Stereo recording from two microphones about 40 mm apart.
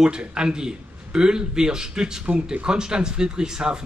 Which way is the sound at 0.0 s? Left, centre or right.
Right.